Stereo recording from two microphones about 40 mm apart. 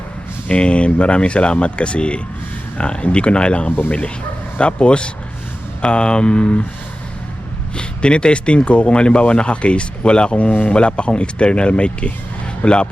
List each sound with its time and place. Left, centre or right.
0.4 s speech: left
7.8 s speech: left